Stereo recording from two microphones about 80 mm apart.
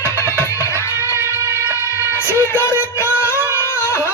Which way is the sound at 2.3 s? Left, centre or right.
Left.